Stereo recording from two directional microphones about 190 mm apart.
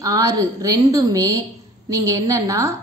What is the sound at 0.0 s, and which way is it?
A woman's voice, 20° right (ahead or behind).